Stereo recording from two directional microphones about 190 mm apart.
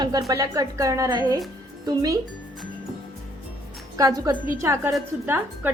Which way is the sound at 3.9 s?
20° right (ahead or behind).